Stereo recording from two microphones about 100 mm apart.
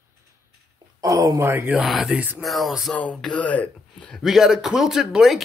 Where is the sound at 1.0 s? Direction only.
35° right (ahead or behind).